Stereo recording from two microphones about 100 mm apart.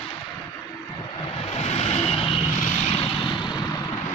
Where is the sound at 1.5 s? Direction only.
90° left; by 2.4 s 65° left (ahead or behind).